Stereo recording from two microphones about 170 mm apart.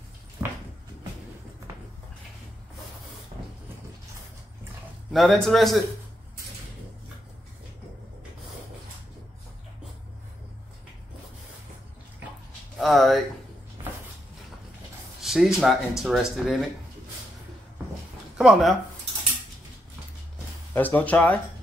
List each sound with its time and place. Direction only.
0.4 s a sound: 15° right (ahead or behind)
3.3 s vehicle: 40° right (ahead or behind)
5.1 s a man's voice: centre (ahead or behind)
12.7 s speech: centre (ahead or behind)
15.2 s a man's voice: centre (ahead or behind)
18.4 s a man's voice: centre (ahead or behind)
20.7 s speech: 10° left (ahead or behind)